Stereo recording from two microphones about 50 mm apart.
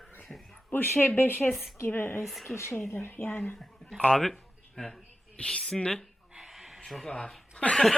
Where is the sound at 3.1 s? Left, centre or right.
Left.